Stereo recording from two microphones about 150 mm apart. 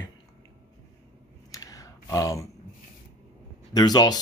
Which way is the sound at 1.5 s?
25° left (ahead or behind).